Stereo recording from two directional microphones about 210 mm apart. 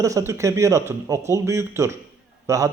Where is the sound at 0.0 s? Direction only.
15° right (ahead or behind).